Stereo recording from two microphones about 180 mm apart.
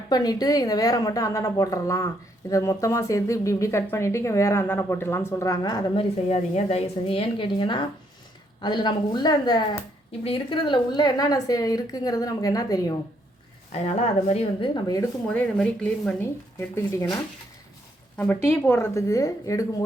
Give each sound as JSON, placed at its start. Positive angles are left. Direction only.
{"t": 0.1, "sound": "speech", "side_deg": 20}
{"t": 6.2, "sound": "speech", "side_deg": 35}
{"t": 13.7, "sound": "a woman's voice", "side_deg": 40}
{"t": 15.3, "sound": "speech", "side_deg": 5}
{"t": 18.4, "sound": "speech", "side_deg": 15}